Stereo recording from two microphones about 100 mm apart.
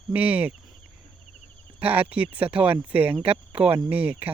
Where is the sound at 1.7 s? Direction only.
15° right (ahead or behind).